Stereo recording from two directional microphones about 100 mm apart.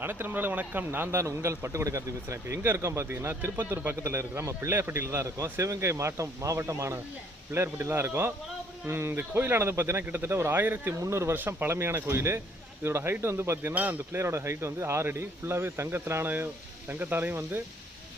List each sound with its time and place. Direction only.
0.0 s speech: 20° right (ahead or behind)